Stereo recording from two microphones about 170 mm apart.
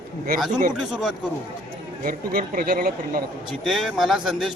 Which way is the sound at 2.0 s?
55° right (ahead or behind).